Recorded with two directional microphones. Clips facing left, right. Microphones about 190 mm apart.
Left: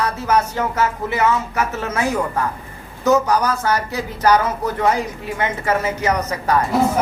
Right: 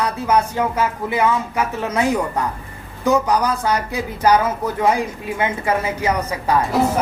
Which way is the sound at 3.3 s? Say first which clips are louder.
Even; 15° right (ahead or behind).